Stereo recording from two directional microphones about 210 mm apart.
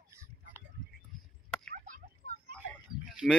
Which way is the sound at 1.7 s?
40° right (ahead or behind).